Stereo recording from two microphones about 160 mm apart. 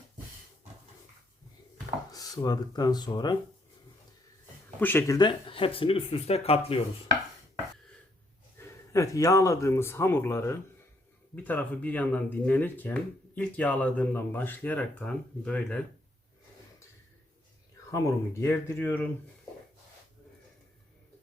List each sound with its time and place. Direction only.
2.1 s speech: 20° left (ahead or behind)
4.8 s speech: 15° left (ahead or behind); by 6.8 s 40° left (ahead or behind)
8.5 s speech: 20° left (ahead or behind)
17.9 s speech: 15° left (ahead or behind)